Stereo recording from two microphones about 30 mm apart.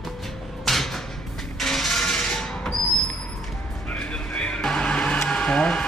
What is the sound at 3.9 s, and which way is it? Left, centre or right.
Music, left.